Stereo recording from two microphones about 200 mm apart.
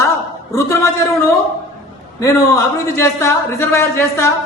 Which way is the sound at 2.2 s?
15° left (ahead or behind).